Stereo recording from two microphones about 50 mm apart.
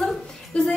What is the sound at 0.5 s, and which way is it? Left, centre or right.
Speech, left.